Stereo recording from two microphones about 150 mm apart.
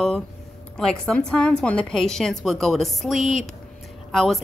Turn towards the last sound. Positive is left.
turn(degrees=0)  # may be behind; listen again after turning